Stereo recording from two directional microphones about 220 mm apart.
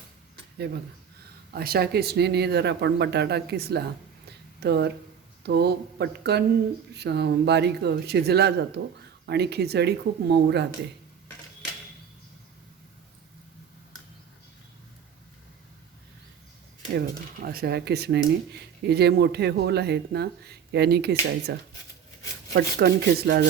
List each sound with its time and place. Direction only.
1.5 s speech: 45° right (ahead or behind)
4.3 s a sound: 50° right (ahead or behind)
5.4 s speech: 50° right (ahead or behind)
17.4 s speech: 45° right (ahead or behind)
22.5 s speech: 45° right (ahead or behind)